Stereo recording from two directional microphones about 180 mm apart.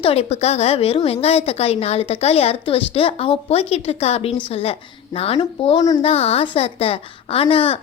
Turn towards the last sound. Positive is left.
turn(degrees=30)  # may be behind; listen again after turning